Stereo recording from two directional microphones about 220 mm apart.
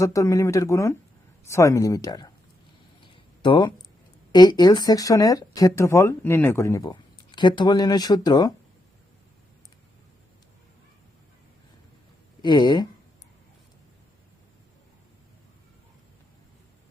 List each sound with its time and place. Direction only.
0.0 s speech: 15° left (ahead or behind)
3.1 s a sound: 20° left (ahead or behind)
4.3 s speech: 20° left (ahead or behind)
12.4 s speech: 20° left (ahead or behind)